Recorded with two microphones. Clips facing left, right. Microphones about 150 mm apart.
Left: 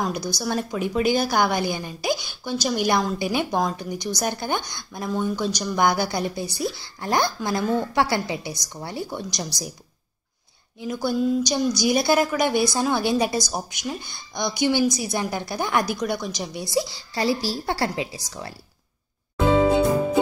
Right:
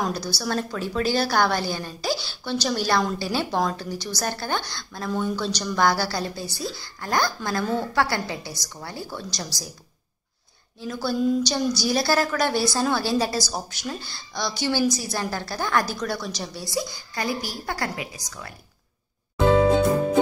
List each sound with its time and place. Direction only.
0.1 s a woman's voice: 15° left (ahead or behind)
10.8 s speech: 15° left (ahead or behind)
11.1 s a woman's voice: 5° left (ahead or behind); by 18.5 s 30° left (ahead or behind)